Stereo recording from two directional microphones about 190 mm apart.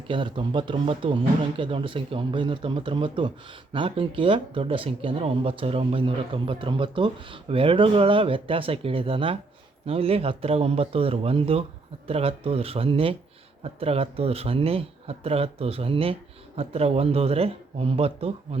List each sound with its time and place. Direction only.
0.1 s speech: 25° right (ahead or behind)